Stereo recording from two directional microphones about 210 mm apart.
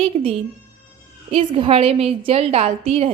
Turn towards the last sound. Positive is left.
turn(degrees=-25)  # may be behind; listen again after turning